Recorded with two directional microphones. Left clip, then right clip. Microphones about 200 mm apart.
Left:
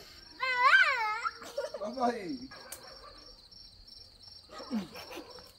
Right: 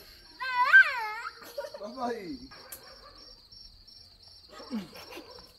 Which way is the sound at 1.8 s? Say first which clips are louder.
Left 3 dB; 30° left (ahead or behind).